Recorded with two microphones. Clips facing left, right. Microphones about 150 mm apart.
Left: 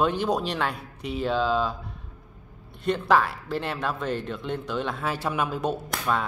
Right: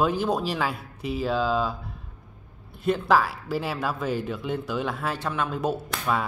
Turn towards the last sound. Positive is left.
turn(degrees=0)  # may be behind; listen again after turning